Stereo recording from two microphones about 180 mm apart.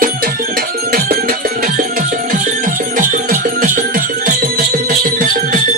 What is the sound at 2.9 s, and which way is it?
Music, 50° right (ahead or behind).